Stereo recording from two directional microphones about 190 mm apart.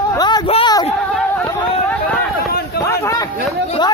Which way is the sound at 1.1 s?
5° left (ahead or behind).